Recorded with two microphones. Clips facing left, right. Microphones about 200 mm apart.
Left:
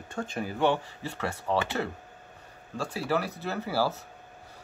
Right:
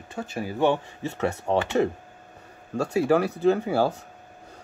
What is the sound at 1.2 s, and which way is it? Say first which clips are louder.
Speech: right 5 dB; 20° right (ahead or behind).